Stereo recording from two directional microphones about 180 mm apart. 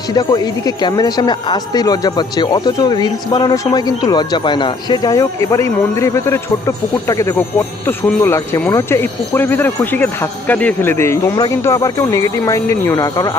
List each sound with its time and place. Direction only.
0.1 s speech: 20° left (ahead or behind)